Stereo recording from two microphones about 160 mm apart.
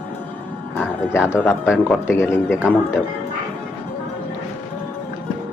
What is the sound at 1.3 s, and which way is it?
Speech, 10° left (ahead or behind).